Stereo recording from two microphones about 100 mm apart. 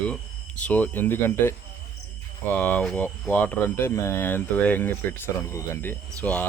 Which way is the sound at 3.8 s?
30° left (ahead or behind).